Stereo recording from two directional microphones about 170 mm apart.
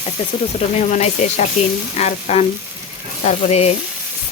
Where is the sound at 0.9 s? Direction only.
45° left (ahead or behind).